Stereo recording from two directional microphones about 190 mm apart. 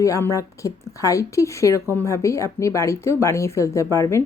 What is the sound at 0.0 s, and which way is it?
Speech, 15° left (ahead or behind).